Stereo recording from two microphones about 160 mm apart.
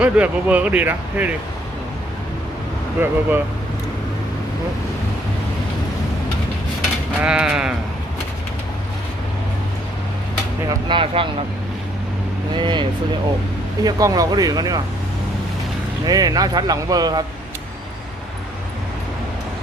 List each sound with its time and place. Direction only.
0.0 s speech: 10° right (ahead or behind)
3.0 s speech: 15° right (ahead or behind)
7.2 s sheep: 5° right (ahead or behind)
10.8 s speech: 35° right (ahead or behind)
12.5 s speech: 30° right (ahead or behind)
13.8 s speech: 20° right (ahead or behind)
16.0 s speech: 25° right (ahead or behind)